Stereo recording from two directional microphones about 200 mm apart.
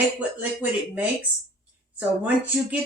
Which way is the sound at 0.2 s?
10° right (ahead or behind).